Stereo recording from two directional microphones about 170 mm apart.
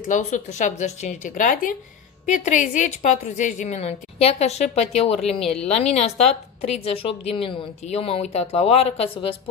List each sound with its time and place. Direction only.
0.1 s a woman's voice: 45° left (ahead or behind)